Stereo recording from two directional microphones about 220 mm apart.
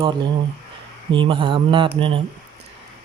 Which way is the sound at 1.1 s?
20° right (ahead or behind).